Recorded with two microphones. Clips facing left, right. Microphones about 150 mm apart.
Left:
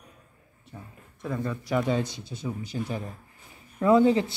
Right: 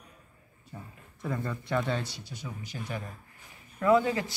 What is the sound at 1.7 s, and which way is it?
Speech, 10° left (ahead or behind).